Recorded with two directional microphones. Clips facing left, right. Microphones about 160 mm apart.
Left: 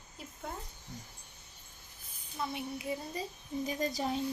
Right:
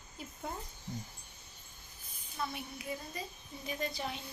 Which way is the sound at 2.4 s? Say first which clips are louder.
Left 3 dB; 20° left (ahead or behind).